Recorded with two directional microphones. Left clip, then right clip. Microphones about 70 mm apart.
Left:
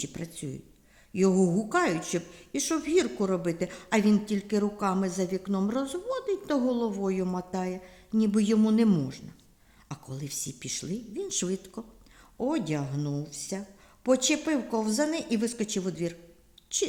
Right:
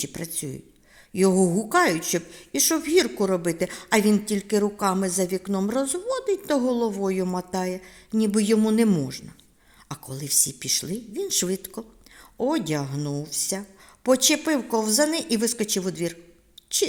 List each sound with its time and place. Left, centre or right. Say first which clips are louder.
0.0 s a woman's voice: right 5 dB; right